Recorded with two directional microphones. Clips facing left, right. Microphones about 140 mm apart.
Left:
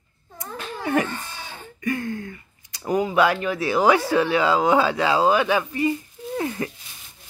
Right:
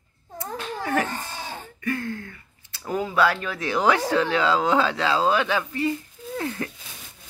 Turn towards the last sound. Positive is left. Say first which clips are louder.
# left 3 dB
turn(degrees=10)  # may be behind; listen again after turning